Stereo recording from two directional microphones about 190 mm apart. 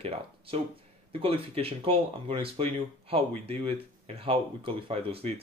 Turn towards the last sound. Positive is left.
turn(degrees=-30)  # may be behind; listen again after turning